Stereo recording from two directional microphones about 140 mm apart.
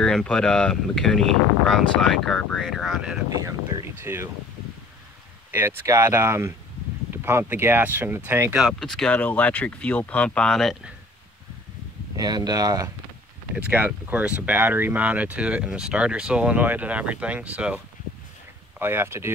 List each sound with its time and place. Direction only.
0.0 s speech: 5° left (ahead or behind)
4.0 s speech: 20° right (ahead or behind)
5.5 s speech: 15° right (ahead or behind)
8.5 s speech: centre (ahead or behind)
12.2 s speech: 30° right (ahead or behind)
13.6 s speech: 10° right (ahead or behind)